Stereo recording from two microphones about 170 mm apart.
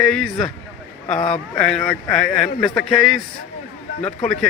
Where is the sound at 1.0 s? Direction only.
40° left (ahead or behind).